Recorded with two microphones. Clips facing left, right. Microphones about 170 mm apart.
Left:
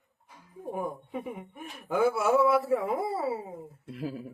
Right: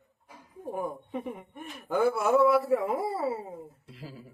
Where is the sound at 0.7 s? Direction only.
Centre (ahead or behind).